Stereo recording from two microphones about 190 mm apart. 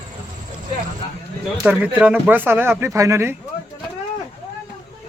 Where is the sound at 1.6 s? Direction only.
5° right (ahead or behind).